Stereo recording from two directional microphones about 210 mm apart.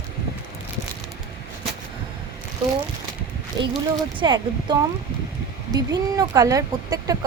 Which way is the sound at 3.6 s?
20° right (ahead or behind).